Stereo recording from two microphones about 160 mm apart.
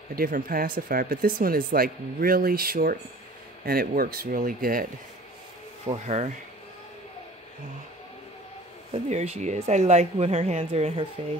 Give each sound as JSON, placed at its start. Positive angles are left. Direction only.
{"t": 0.1, "sound": "speech", "side_deg": -65}
{"t": 5.9, "sound": "speech", "side_deg": -45}
{"t": 8.9, "sound": "speech", "side_deg": -40}